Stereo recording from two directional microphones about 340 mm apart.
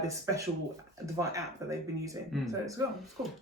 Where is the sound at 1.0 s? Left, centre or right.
Centre.